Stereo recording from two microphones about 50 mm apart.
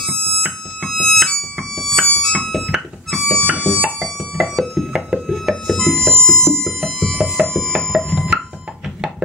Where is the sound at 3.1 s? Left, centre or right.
Centre.